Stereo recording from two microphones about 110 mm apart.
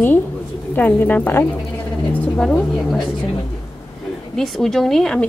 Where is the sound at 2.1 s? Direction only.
15° left (ahead or behind).